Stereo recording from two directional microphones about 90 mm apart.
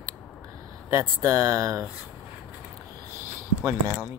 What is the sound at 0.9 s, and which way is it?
Speech, 30° right (ahead or behind).